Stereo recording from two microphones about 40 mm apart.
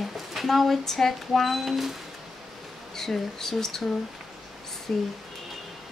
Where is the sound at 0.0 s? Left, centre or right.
Centre.